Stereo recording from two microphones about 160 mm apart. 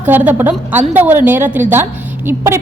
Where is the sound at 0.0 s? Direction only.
10° right (ahead or behind).